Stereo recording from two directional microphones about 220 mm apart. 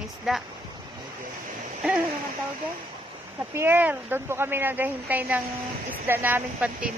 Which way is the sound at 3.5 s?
10° right (ahead or behind).